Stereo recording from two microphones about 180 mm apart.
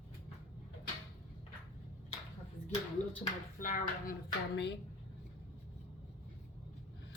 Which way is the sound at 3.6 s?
50° left (ahead or behind).